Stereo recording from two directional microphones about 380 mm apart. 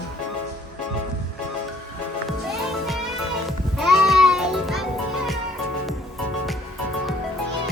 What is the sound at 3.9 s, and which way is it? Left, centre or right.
Music, centre.